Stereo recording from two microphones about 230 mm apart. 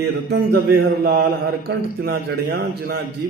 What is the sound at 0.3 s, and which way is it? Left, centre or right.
A man's voice, right.